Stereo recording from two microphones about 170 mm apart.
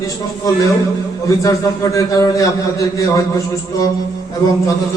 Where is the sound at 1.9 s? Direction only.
20° left (ahead or behind).